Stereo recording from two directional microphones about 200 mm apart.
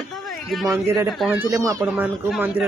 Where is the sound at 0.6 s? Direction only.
15° right (ahead or behind).